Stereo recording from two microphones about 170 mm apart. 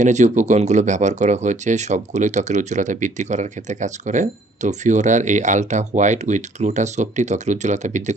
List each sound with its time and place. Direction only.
0.0 s speech: 45° right (ahead or behind)